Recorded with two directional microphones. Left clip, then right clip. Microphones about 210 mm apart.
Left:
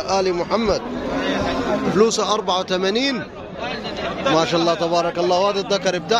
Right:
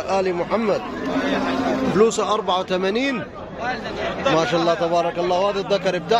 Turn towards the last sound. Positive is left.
turn(degrees=-5)  # may be behind; listen again after turning